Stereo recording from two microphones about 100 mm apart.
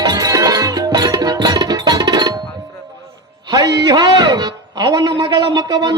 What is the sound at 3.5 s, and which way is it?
A man's voice, 40° right (ahead or behind).